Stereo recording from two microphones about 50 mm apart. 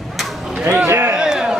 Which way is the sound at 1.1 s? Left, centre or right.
Centre.